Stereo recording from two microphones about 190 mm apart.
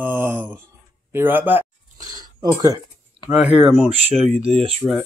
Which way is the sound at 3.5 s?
Centre (ahead or behind).